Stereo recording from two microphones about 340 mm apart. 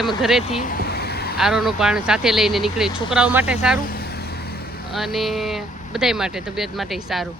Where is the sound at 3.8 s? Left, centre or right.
Left.